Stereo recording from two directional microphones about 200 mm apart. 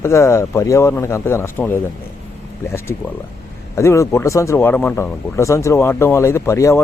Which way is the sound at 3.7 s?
15° left (ahead or behind).